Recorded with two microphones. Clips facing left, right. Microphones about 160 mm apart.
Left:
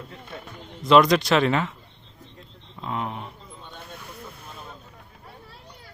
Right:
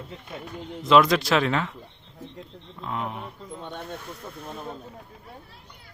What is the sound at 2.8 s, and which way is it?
Speech, centre (ahead or behind).